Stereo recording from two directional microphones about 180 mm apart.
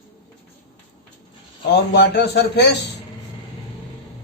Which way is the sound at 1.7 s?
70° left (ahead or behind).